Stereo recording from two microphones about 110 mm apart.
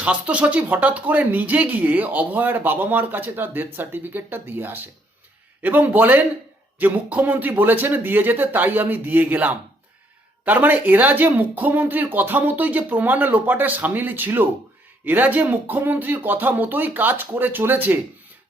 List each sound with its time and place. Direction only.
0.0 s speech: 10° right (ahead or behind)